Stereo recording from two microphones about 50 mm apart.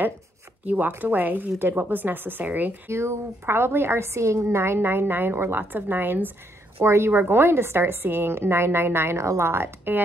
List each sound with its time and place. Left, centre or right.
0.7 s speech: right
2.9 s a woman's voice: right
6.8 s speech: right
7.1 s a woman's voice: right